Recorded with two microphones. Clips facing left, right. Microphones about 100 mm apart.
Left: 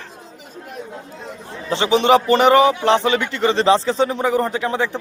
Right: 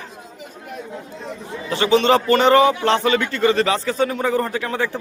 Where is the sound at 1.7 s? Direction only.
20° left (ahead or behind).